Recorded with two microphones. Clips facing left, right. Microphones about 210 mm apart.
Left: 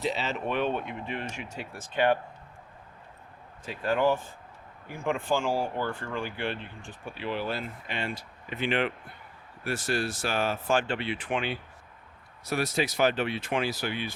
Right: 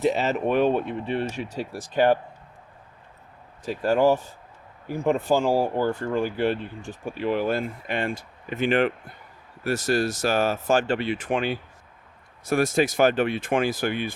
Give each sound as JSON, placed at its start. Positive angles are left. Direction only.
{"t": 0.0, "sound": "speech", "side_deg": -45}
{"t": 3.7, "sound": "speech", "side_deg": -40}